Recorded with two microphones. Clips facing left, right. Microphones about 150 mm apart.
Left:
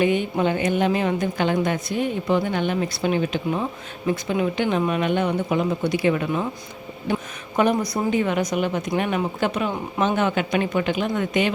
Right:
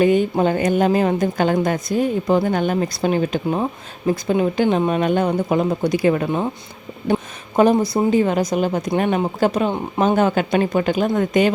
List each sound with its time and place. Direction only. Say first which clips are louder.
0.0 s a woman's voice: right 5 dB; 40° right (ahead or behind)